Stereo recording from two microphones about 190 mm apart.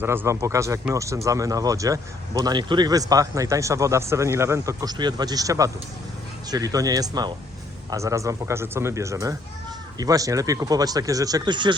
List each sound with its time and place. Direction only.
0.0 s speech: 10° right (ahead or behind)